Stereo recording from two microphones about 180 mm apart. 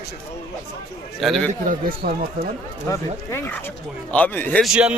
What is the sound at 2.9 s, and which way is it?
A man's voice, 15° left (ahead or behind).